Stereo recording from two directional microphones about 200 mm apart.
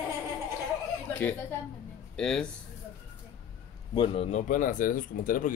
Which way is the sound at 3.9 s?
25° left (ahead or behind).